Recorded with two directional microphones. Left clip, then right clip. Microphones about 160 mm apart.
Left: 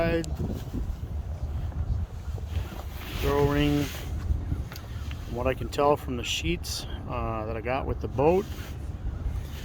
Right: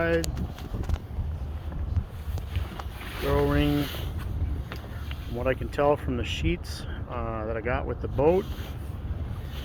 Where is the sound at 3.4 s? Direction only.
35° left (ahead or behind).